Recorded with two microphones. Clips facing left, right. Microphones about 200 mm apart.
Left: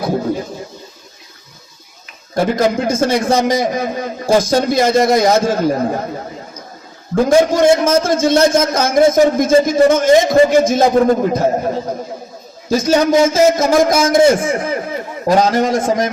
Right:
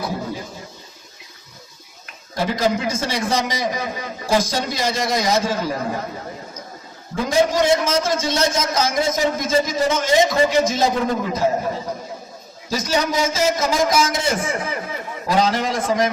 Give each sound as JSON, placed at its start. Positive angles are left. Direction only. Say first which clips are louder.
{"t": 2.3, "sound": "a man's voice", "louder": "left 6 dB", "side_deg": 50}
{"t": 7.2, "sound": "a man's voice", "louder": "left 7 dB", "side_deg": 50}
{"t": 12.7, "sound": "a man's voice", "louder": "left 9 dB", "side_deg": 50}